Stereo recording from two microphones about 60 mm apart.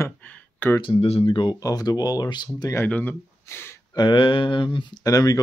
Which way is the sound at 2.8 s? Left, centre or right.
Left.